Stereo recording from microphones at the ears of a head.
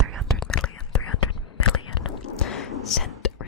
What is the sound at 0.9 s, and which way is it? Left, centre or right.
Whispering, left.